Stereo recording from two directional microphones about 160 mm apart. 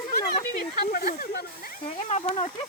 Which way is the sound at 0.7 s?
60° left (ahead or behind).